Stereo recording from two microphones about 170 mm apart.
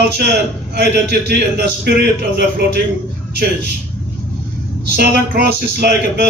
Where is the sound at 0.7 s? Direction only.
75° right (ahead or behind).